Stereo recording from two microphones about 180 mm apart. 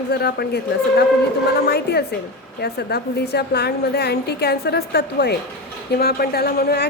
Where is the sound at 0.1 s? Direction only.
65° left (ahead or behind).